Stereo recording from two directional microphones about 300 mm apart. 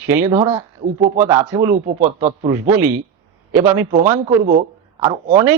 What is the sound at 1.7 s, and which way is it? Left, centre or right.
Speech, right.